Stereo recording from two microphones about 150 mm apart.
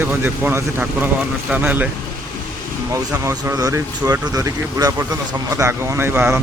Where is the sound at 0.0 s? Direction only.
10° right (ahead or behind).